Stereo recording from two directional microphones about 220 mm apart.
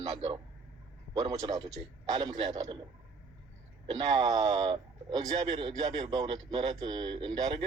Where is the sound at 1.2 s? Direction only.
20° right (ahead or behind).